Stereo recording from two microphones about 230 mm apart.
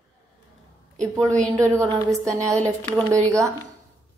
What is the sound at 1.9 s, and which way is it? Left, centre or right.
Speech, centre.